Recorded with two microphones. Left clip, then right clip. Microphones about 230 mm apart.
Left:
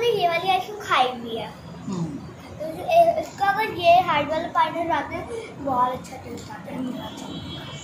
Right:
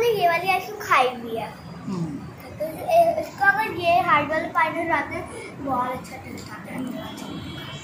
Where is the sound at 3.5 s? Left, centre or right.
Left.